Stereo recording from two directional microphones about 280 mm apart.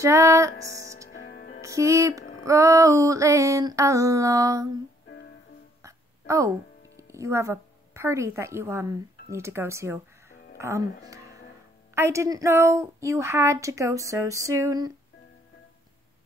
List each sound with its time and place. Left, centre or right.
0.0 s music: centre
1.2 s music: left
1.6 s a woman's voice: centre
5.8 s hiccup: centre
7.0 s a woman's voice: centre